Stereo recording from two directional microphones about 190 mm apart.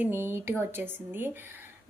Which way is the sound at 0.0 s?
10° right (ahead or behind).